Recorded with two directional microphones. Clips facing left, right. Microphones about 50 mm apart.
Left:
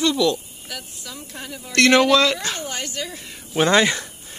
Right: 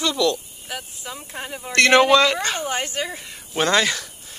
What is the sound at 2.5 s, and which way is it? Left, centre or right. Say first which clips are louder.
Speech: right 4 dB; right.